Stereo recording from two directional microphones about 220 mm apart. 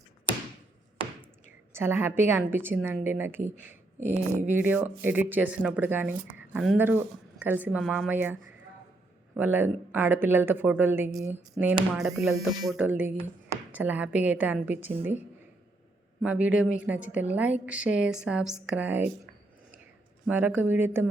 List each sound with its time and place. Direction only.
1.7 s speech: 10° right (ahead or behind)
3.6 s a sound: 10° right (ahead or behind)
4.4 s speech: 10° right (ahead or behind)
11.9 s a woman's voice: centre (ahead or behind)
12.3 s speech: 20° right (ahead or behind)
12.6 s speech: 5° right (ahead or behind)
16.2 s a woman's voice: 5° right (ahead or behind)
20.2 s speech: 10° right (ahead or behind)